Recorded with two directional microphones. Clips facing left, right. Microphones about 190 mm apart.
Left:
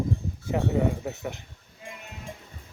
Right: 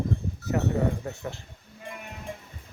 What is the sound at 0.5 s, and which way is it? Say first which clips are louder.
Speech: left 1 dB; 15° left (ahead or behind).